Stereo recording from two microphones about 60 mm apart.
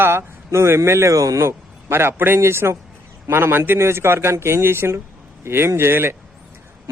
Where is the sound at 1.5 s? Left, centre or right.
Right.